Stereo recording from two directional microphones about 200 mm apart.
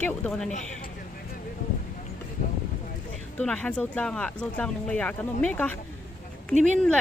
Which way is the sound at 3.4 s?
5° left (ahead or behind).